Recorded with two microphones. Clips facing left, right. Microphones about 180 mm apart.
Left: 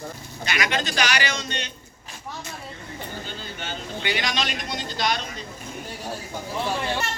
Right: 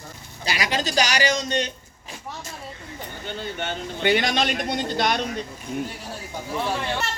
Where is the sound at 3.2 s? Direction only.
55° right (ahead or behind).